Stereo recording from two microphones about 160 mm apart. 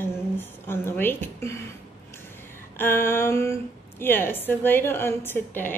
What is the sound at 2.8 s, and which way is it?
A woman's voice, 15° left (ahead or behind).